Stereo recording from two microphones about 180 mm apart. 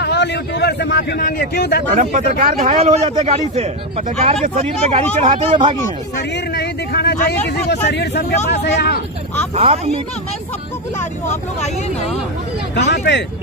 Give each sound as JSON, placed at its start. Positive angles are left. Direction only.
{"t": 0.0, "sound": "speech", "side_deg": 70}
{"t": 2.0, "sound": "a man's voice", "side_deg": -45}
{"t": 6.5, "sound": "speech", "side_deg": 65}
{"t": 11.0, "sound": "speech", "side_deg": 40}
{"t": 12.7, "sound": "speech", "side_deg": 70}